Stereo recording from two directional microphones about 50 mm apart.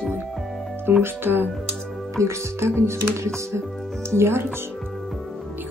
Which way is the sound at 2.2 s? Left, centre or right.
Right.